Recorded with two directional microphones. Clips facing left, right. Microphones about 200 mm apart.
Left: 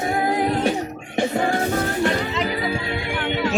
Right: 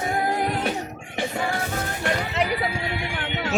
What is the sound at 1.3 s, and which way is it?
Music, 40° left (ahead or behind).